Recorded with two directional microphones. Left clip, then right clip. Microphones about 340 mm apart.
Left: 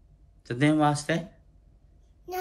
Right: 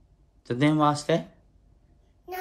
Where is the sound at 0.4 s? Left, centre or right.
Centre.